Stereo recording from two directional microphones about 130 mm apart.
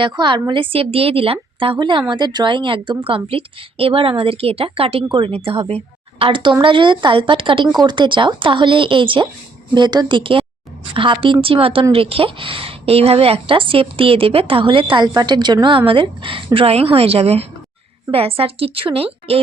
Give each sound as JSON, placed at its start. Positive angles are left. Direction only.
{"t": 0.0, "sound": "a woman's voice", "side_deg": -40}